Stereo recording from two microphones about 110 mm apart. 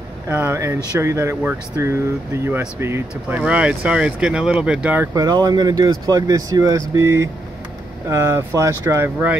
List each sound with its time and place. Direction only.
0.3 s speech: 20° right (ahead or behind)
5.1 s speech: 35° right (ahead or behind); by 9.4 s 15° right (ahead or behind)